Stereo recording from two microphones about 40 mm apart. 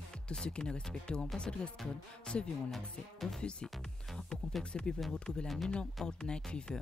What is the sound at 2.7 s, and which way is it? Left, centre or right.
Speech, centre.